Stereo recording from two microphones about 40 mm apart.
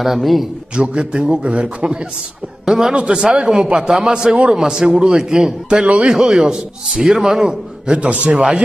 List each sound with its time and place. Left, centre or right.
0.0 s a man's voice: centre
0.7 s a man's voice: right
2.6 s a man's voice: centre
7.4 s a man's voice: right